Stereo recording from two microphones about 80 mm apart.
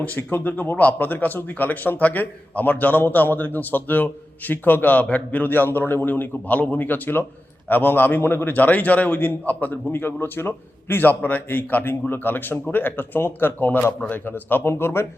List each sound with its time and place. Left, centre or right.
0.0 s speech: left